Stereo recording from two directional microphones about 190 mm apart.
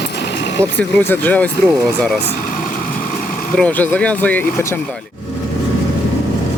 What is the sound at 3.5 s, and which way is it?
Speech, 5° left (ahead or behind).